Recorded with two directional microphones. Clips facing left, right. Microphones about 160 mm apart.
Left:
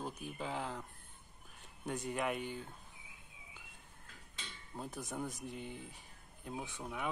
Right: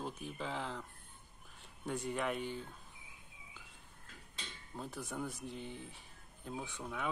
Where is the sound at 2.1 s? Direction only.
10° left (ahead or behind).